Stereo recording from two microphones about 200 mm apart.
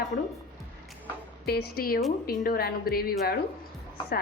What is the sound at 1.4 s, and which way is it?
A woman's voice, 55° left (ahead or behind).